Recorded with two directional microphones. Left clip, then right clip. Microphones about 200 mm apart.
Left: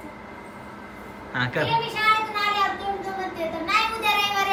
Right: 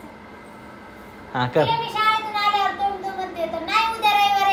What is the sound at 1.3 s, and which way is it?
Speech, 20° right (ahead or behind).